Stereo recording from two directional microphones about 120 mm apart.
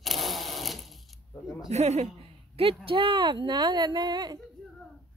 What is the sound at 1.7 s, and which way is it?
Speech, 70° right (ahead or behind).